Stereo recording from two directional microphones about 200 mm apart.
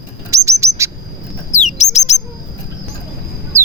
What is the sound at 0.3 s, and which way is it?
Chirp, 15° right (ahead or behind).